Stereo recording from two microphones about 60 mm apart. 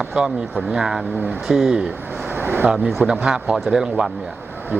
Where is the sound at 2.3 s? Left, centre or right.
Right.